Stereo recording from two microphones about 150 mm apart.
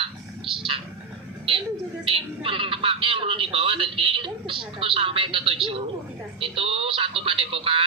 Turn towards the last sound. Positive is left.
turn(degrees=-35)  # may be behind; listen again after turning